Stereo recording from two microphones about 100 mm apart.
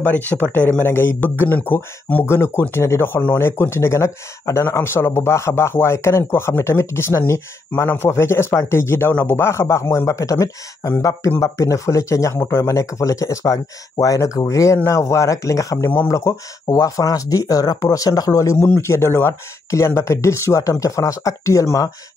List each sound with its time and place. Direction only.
0.0 s speech: 15° left (ahead or behind); by 21.9 s 35° left (ahead or behind)